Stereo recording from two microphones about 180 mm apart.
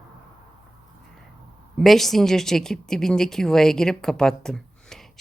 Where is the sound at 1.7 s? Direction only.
Centre (ahead or behind).